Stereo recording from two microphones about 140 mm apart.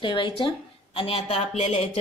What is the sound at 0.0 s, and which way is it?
A woman's voice, 35° left (ahead or behind).